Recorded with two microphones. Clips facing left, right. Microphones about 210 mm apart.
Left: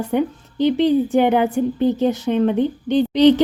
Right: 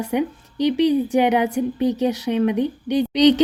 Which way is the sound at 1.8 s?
15° right (ahead or behind).